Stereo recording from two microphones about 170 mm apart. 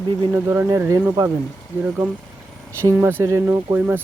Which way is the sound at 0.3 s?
15° right (ahead or behind).